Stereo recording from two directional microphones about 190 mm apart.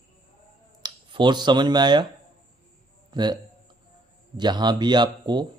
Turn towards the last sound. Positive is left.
turn(degrees=-25)  # may be behind; listen again after turning